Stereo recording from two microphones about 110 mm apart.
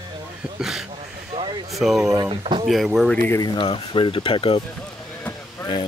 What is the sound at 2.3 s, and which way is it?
Speech, 55° right (ahead or behind).